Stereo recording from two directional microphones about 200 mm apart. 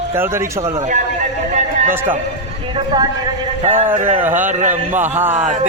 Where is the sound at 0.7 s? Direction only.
35° right (ahead or behind).